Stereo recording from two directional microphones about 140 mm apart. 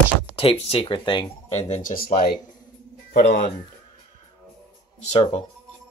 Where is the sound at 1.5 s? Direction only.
55° left (ahead or behind).